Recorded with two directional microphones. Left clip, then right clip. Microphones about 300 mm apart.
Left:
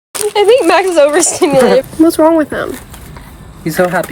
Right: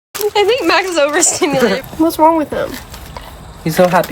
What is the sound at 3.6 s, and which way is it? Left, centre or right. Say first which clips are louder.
Speech: right 1 dB; centre.